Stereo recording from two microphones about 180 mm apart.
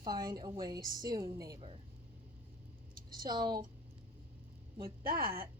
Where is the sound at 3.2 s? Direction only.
20° right (ahead or behind).